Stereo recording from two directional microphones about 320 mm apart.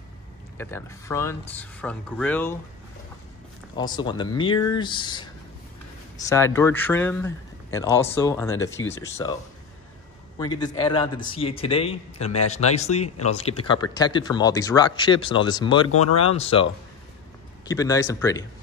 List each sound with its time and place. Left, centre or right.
0.6 s speech: centre
3.7 s speech: centre
10.4 s speech: centre
16.0 s speech: left
16.3 s speech: centre